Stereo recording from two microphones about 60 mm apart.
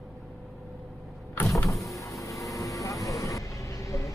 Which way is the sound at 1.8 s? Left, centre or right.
Left.